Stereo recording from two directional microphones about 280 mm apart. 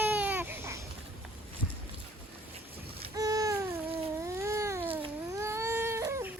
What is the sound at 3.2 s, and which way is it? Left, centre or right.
Babbling, centre.